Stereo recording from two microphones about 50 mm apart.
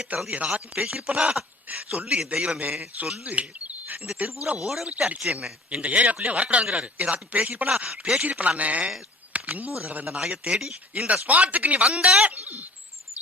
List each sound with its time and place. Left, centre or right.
0.1 s speech: right
0.5 s speech: centre
1.7 s speech: right
2.6 s speech: right
3.2 s bird: right
4.5 s speech: centre
5.8 s speech: right
10.2 s speech: right
10.9 s speech: right
11.9 s speech: centre
12.4 s speech: right